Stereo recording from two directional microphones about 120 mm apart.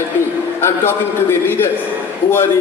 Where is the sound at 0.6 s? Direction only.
20° left (ahead or behind).